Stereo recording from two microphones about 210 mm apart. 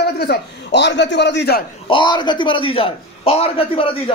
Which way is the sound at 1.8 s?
25° left (ahead or behind).